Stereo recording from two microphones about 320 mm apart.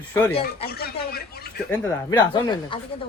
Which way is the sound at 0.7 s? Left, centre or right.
Left.